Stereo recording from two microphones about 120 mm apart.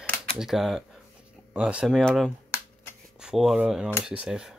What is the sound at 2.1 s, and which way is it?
Speech, 5° left (ahead or behind).